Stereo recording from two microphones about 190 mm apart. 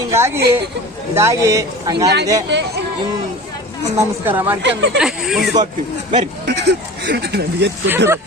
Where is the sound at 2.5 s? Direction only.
65° right (ahead or behind).